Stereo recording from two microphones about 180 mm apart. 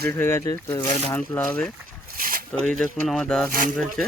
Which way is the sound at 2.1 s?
50° right (ahead or behind).